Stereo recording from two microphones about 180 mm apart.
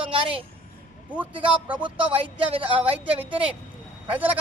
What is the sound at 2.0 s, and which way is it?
Speech, 30° right (ahead or behind).